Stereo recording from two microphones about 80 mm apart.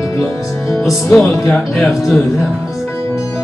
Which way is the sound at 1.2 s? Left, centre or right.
Left.